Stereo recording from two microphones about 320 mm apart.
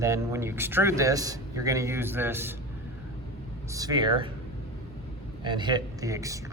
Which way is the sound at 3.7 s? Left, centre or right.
Centre.